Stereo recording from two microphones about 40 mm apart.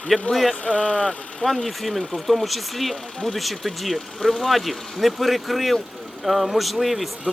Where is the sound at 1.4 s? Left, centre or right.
Centre.